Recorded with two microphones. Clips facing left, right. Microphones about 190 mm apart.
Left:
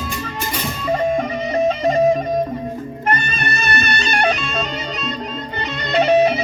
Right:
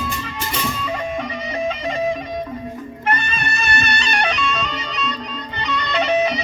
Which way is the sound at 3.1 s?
40° left (ahead or behind).